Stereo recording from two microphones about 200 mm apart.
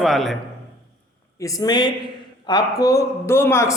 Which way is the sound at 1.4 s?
20° left (ahead or behind).